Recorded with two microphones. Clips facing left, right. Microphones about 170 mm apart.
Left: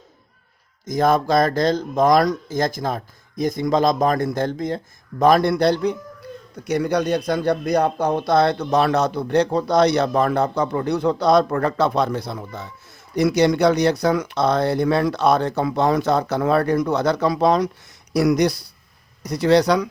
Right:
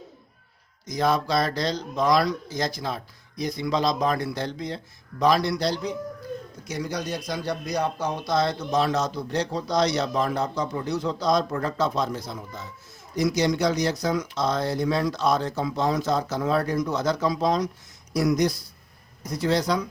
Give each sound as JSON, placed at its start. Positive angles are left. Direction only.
{"t": 0.9, "sound": "speech", "side_deg": 50}